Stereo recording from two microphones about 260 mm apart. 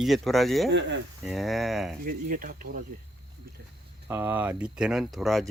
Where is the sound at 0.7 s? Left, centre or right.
Right.